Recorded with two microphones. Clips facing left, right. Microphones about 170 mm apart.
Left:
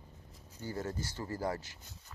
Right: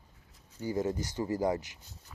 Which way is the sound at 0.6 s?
15° right (ahead or behind).